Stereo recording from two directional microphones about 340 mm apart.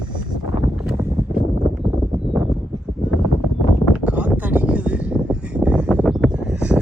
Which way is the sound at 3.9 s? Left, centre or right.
Centre.